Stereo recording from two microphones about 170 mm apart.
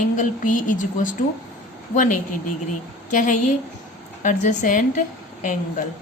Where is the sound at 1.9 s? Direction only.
50° left (ahead or behind).